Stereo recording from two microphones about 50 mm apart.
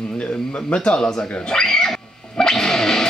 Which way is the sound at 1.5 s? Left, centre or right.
Centre.